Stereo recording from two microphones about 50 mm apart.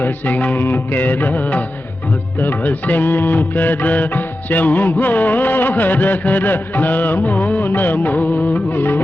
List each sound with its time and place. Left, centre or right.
0.0 s music: left